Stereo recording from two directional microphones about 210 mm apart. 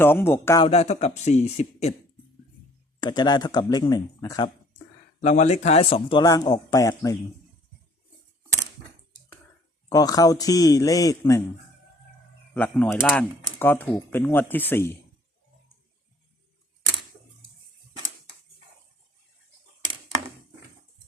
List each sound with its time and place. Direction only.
0.0 s speech: 10° left (ahead or behind)
0.6 s speech: 30° left (ahead or behind)
3.0 s a man's voice: 20° left (ahead or behind)
5.2 s a man's voice: 35° left (ahead or behind); by 7.2 s 15° left (ahead or behind)
9.9 s speech: 15° left (ahead or behind)
12.5 s speech: 10° left (ahead or behind)